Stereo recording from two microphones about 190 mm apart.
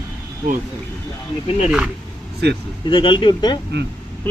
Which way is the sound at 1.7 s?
5° right (ahead or behind).